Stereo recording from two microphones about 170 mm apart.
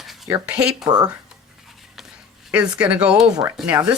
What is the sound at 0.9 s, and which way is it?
Speech, 25° right (ahead or behind).